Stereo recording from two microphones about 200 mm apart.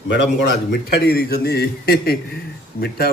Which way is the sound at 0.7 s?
55° left (ahead or behind).